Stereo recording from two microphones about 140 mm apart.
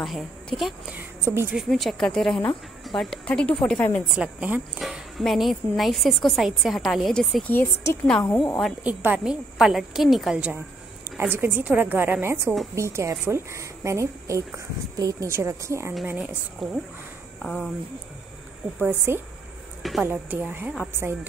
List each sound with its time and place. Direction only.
0.0 s speech: centre (ahead or behind)
0.9 s a woman's voice: 15° right (ahead or behind)
1.6 s speech: centre (ahead or behind)
4.1 s speech: 5° right (ahead or behind)
7.4 s a woman's voice: 15° left (ahead or behind)
8.8 s a woman's voice: 10° right (ahead or behind)
16.2 s speech: centre (ahead or behind)
18.8 s a woman's voice: 15° right (ahead or behind)
19.8 s speech: centre (ahead or behind)
20.1 s a woman's voice: 15° right (ahead or behind)